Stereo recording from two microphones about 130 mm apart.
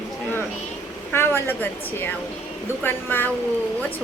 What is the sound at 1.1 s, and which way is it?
A woman's voice, 15° left (ahead or behind).